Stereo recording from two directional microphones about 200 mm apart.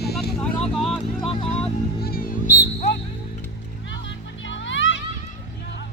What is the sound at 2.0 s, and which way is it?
Music, 45° left (ahead or behind).